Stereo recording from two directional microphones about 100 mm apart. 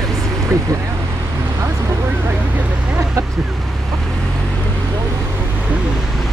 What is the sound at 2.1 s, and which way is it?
Vehicle, 15° right (ahead or behind).